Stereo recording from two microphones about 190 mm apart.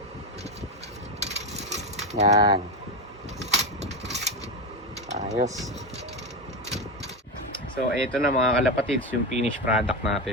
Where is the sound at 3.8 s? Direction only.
35° right (ahead or behind).